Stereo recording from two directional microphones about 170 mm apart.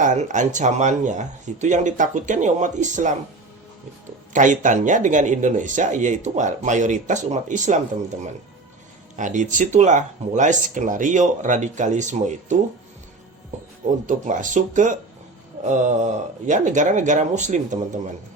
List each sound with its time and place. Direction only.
0.0 s speech: 45° right (ahead or behind)
4.3 s speech: 50° right (ahead or behind)
9.1 s speech: 50° right (ahead or behind)
14.1 s speech: 50° right (ahead or behind)